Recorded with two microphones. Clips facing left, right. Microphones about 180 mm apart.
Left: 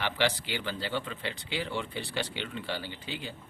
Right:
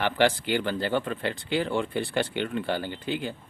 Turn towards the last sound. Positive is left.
turn(degrees=-50)  # may be behind; listen again after turning